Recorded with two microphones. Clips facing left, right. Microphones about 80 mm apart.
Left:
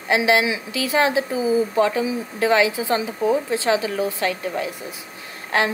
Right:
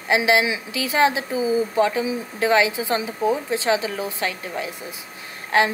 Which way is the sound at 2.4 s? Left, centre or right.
Right.